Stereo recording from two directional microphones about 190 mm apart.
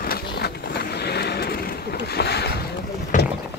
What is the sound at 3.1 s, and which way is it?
Boat, 40° left (ahead or behind).